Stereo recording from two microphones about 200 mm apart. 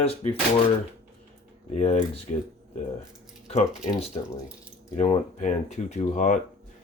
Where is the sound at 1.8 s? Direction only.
35° left (ahead or behind).